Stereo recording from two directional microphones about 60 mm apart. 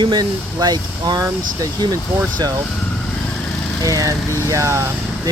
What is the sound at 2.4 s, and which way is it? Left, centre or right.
Speech, right.